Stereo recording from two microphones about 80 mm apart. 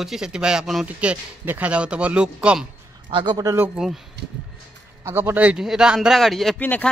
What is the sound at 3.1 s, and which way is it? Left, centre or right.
Speech, right.